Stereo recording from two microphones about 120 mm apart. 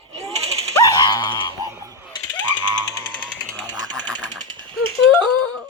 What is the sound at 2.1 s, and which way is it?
Jackhammer, 40° left (ahead or behind).